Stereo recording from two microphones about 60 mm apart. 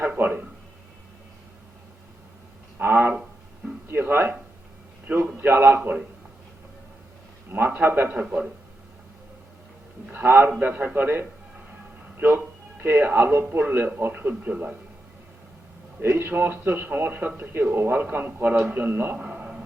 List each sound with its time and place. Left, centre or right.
0.2 s a man's voice: right
2.7 s a sound: right
5.4 s a man's voice: right
7.5 s a man's voice: right
8.1 s a man's voice: right
10.1 s a man's voice: right
16.0 s a man's voice: right